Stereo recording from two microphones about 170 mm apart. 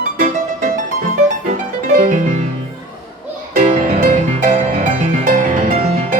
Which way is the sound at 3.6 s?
55° right (ahead or behind).